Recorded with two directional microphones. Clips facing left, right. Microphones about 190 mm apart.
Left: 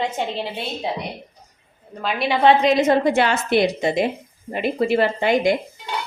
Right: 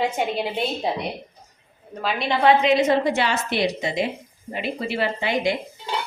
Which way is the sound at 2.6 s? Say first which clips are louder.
Left 2 dB; 50° left (ahead or behind).